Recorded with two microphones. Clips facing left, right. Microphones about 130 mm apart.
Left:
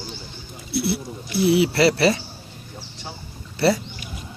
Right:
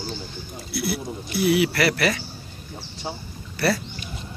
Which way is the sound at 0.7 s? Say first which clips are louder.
Left 3 dB; 30° left (ahead or behind).